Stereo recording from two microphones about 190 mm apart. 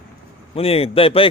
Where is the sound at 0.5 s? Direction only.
30° left (ahead or behind).